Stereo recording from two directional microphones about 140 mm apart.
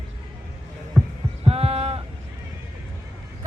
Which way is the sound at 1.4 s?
45° right (ahead or behind).